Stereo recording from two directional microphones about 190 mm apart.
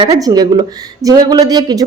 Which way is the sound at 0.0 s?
20° right (ahead or behind).